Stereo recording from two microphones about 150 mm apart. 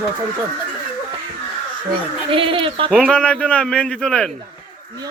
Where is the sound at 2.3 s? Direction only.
35° right (ahead or behind).